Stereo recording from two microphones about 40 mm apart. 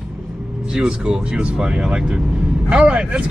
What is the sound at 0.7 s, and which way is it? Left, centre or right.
Speech, right.